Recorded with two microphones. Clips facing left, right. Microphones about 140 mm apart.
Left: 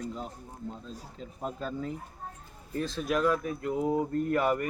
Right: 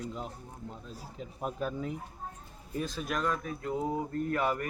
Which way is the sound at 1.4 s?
15° right (ahead or behind).